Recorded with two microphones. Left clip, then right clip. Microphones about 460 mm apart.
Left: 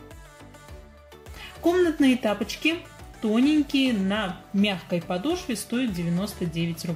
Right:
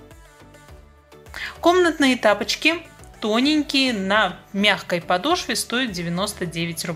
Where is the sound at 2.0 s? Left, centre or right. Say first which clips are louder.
Right 6 dB; right.